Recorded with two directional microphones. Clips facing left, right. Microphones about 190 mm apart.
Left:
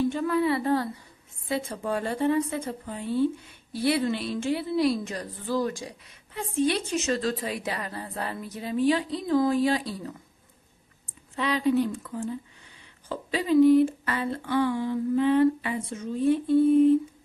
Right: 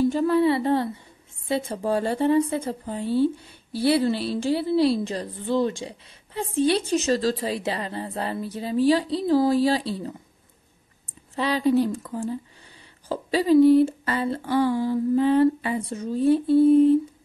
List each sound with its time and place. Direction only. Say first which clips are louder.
0.0 s a woman's voice: right 5 dB; 35° right (ahead or behind)
11.3 s a woman's voice: right 3 dB; 35° right (ahead or behind)